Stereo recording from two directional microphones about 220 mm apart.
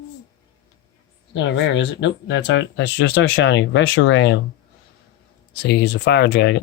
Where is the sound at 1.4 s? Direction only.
55° left (ahead or behind).